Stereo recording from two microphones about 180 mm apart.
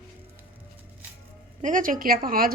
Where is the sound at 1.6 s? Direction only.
45° right (ahead or behind).